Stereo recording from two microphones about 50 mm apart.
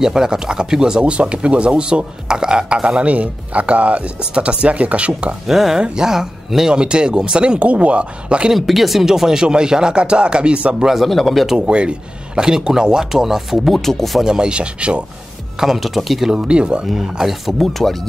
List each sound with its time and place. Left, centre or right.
0.0 s speech: centre
3.1 s speech: right
5.5 s speech: centre; by 8.5 s right
8.5 s speech: centre; by 10.9 s right
10.9 s speech: centre
11.5 s speech: right; by 14.2 s centre
14.2 s speech: centre
15.6 s speech: centre
16.3 s speech: centre
16.8 s speech: centre